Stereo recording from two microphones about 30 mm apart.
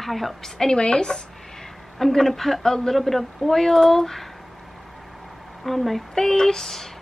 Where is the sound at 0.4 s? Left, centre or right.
Centre.